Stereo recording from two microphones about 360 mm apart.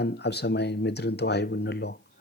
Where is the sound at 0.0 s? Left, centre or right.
Left.